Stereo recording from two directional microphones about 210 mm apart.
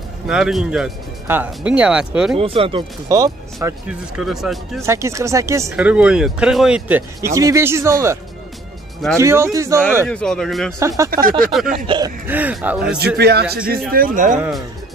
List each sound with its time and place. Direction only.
0.3 s speech: centre (ahead or behind)
2.3 s speech: 25° right (ahead or behind)
4.2 s speech: centre (ahead or behind)
4.8 s speech: 15° right (ahead or behind)
10.0 s speech: 5° left (ahead or behind)
10.8 s speech: 15° right (ahead or behind)
11.1 s speech: 40° right (ahead or behind)
11.9 s speech: 25° right (ahead or behind)
12.3 s speech: 10° right (ahead or behind)
13.2 s a man's voice: 50° right (ahead or behind)